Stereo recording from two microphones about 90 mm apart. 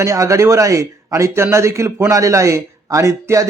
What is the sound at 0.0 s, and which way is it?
Speech, 35° right (ahead or behind).